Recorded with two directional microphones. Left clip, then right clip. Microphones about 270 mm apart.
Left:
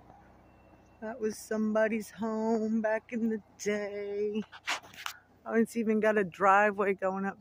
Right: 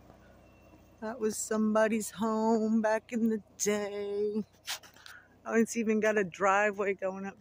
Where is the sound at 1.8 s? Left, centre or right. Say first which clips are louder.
Right 1 dB; centre.